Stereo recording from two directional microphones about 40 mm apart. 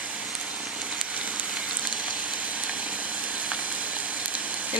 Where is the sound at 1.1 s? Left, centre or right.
Right.